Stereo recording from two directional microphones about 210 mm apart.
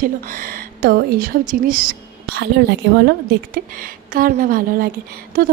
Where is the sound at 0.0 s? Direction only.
40° right (ahead or behind).